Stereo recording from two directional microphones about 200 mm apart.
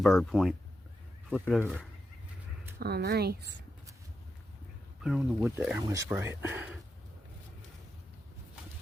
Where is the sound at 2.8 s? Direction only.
50° right (ahead or behind).